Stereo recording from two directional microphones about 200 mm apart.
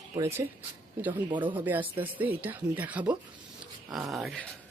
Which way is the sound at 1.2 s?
25° right (ahead or behind).